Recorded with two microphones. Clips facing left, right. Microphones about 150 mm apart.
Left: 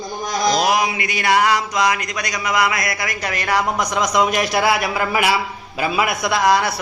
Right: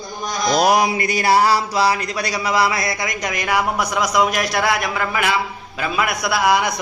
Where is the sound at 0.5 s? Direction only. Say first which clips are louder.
Right 3 dB; 40° right (ahead or behind).